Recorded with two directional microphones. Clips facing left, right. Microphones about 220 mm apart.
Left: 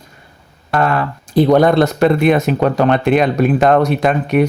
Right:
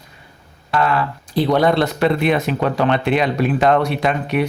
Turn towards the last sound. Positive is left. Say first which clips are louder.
# left 5 dB
turn(degrees=45)  # may be behind; listen again after turning